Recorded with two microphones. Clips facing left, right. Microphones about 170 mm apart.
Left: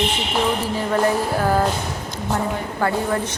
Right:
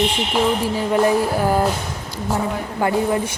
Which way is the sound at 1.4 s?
10° right (ahead or behind).